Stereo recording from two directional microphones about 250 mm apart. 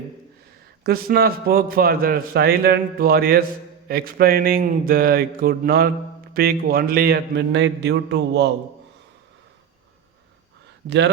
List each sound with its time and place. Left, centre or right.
0.9 s a man's voice: right
10.8 s speech: right